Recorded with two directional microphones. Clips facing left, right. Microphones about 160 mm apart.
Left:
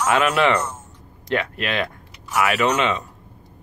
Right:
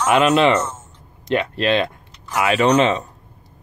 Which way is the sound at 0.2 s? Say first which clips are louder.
Right 4 dB; 20° right (ahead or behind).